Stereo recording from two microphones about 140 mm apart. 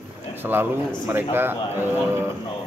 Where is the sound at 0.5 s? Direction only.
15° right (ahead or behind).